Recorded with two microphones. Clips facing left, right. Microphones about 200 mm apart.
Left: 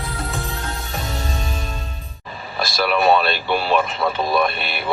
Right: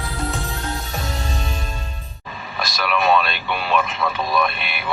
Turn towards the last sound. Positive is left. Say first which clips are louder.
# left 2 dB
turn(degrees=35)  # may be behind; listen again after turning